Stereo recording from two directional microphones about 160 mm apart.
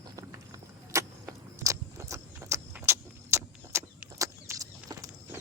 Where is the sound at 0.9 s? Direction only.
20° right (ahead or behind).